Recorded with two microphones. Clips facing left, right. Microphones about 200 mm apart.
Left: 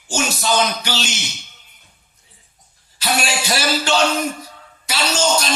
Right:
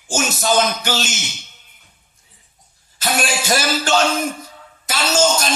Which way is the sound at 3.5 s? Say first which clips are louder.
Right 1 dB; 45° right (ahead or behind).